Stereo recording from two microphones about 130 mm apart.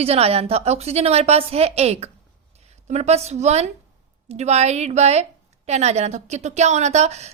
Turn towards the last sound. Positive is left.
turn(degrees=-60)  # may be behind; listen again after turning